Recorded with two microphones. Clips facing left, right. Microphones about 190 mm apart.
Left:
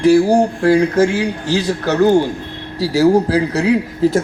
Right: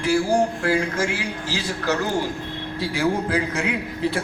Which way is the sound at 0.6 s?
40° left (ahead or behind).